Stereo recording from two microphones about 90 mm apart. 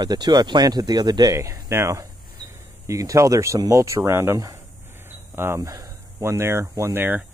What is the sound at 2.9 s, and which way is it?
Speech, 35° right (ahead or behind).